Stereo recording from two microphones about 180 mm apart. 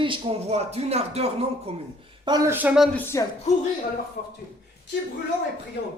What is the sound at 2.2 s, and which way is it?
Speech, 20° right (ahead or behind).